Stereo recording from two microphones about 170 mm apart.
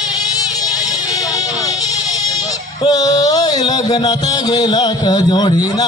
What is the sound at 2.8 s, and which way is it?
Music, 20° left (ahead or behind).